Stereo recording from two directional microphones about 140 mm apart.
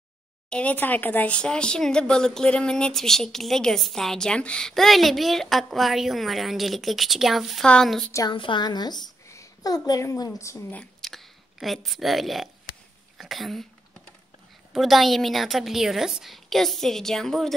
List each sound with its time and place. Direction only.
0.5 s speech: 10° left (ahead or behind)
8.1 s a woman's voice: 25° left (ahead or behind)
10.8 s speech: centre (ahead or behind)
14.7 s speech: centre (ahead or behind)